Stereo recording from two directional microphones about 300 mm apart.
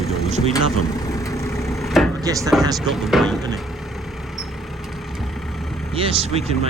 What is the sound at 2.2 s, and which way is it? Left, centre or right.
Speech, centre.